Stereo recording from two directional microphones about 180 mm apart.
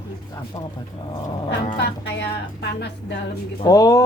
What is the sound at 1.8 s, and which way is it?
Speech, 70° left (ahead or behind).